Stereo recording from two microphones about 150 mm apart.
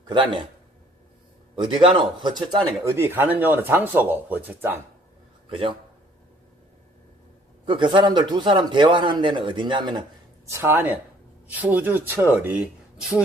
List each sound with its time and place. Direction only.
0.0 s a man's voice: 30° right (ahead or behind)
1.5 s a man's voice: 30° right (ahead or behind)
2.8 s speech: 15° right (ahead or behind)
5.5 s a man's voice: 35° right (ahead or behind)
7.6 s a man's voice: 35° right (ahead or behind)
10.5 s speech: 15° right (ahead or behind)